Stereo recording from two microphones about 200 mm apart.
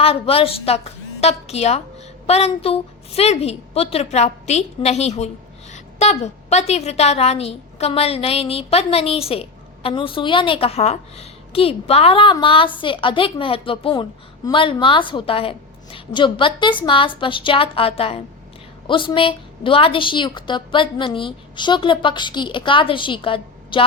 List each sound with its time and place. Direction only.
0.0 s a woman's voice: 30° left (ahead or behind)